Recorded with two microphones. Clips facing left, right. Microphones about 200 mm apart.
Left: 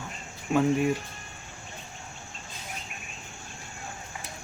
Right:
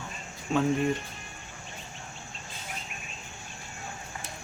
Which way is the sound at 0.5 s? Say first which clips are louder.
Left 2 dB; 5° left (ahead or behind).